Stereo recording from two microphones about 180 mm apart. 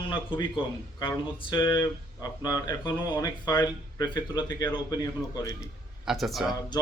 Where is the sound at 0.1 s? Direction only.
25° left (ahead or behind).